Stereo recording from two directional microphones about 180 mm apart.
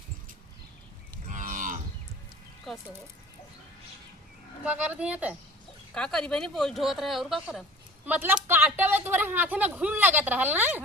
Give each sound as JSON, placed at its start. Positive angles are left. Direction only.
{"t": 1.3, "sound": "moo", "side_deg": -45}
{"t": 2.7, "sound": "a sound", "side_deg": 0}
{"t": 4.6, "sound": "speech", "side_deg": -5}
{"t": 5.9, "sound": "speech", "side_deg": 5}